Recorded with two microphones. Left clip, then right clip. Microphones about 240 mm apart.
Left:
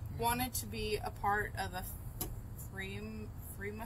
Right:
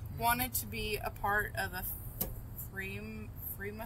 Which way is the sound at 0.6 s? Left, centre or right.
Right.